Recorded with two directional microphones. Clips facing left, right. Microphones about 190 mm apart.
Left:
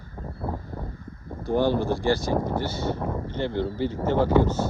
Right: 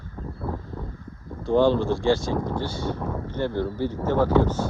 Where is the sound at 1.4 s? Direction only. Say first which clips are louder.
Right 3 dB; 15° left (ahead or behind).